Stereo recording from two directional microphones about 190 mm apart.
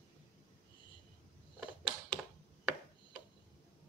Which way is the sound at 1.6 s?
5° right (ahead or behind).